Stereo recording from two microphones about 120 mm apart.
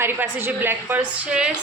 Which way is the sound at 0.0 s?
20° right (ahead or behind).